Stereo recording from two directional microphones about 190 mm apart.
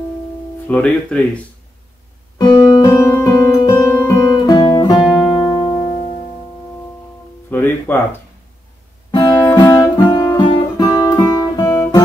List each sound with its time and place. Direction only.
0.7 s speech: 5° left (ahead or behind)
2.3 s music: 25° left (ahead or behind)
7.5 s music: 10° left (ahead or behind)
9.1 s guitar: 20° left (ahead or behind)